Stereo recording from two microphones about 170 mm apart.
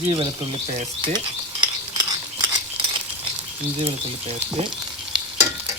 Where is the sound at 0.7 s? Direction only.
30° right (ahead or behind).